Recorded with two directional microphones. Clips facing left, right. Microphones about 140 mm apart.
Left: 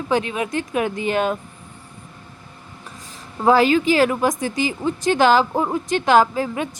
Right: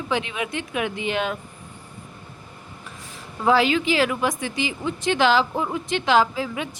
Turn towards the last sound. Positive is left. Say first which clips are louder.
# left 4 dB
turn(degrees=45)  # may be behind; listen again after turning